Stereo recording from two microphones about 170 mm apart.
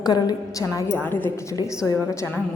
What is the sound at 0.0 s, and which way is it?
A woman's voice, 25° left (ahead or behind).